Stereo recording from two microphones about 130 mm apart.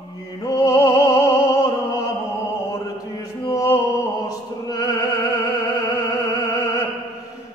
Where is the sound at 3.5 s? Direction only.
25° left (ahead or behind).